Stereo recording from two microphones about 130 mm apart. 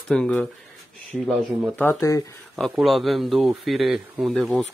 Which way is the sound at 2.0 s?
20° left (ahead or behind).